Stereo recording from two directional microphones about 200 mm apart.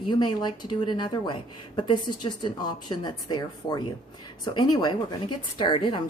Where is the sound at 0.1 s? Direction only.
20° left (ahead or behind).